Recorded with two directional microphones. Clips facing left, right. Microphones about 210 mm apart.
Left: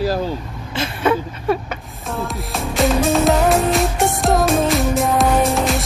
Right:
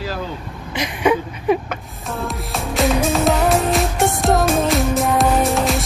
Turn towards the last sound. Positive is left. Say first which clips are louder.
# even
turn(degrees=0)  # may be behind; listen again after turning